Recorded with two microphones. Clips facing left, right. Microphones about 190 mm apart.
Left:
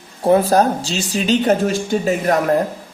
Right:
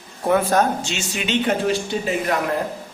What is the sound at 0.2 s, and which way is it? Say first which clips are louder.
Speech: left 4 dB; 30° left (ahead or behind).